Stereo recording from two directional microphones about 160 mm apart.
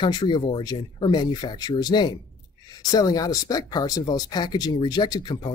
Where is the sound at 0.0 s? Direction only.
30° left (ahead or behind).